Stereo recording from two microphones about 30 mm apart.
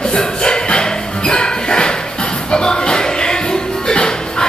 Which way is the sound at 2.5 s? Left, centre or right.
Left.